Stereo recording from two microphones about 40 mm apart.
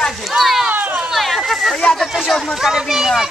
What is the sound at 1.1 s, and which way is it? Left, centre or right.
Speech, centre.